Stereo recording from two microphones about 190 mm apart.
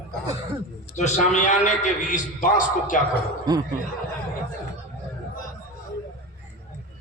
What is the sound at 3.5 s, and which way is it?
Speech, 20° right (ahead or behind).